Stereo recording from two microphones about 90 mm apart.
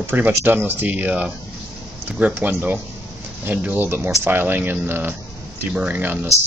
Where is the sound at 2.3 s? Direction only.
25° right (ahead or behind).